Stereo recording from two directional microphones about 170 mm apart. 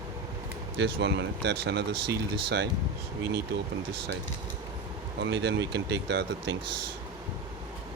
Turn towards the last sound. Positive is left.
turn(degrees=-80)